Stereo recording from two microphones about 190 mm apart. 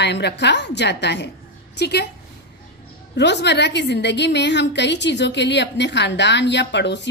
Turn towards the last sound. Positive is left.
turn(degrees=65)  # may be behind; listen again after turning